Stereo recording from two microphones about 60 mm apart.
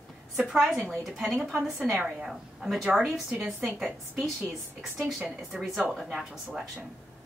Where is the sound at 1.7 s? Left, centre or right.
Right.